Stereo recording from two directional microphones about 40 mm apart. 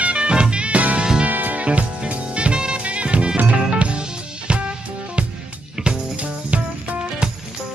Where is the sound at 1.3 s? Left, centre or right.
Right.